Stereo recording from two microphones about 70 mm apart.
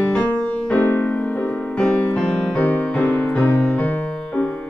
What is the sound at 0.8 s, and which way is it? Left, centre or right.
Music, left.